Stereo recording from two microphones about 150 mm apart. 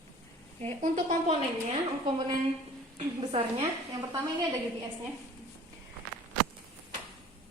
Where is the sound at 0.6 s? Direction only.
50° right (ahead or behind).